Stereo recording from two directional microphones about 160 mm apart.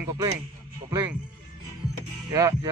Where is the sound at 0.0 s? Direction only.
20° right (ahead or behind).